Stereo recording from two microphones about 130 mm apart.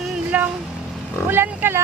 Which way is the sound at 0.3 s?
10° right (ahead or behind).